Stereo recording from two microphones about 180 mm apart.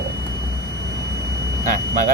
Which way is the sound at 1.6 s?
50° right (ahead or behind).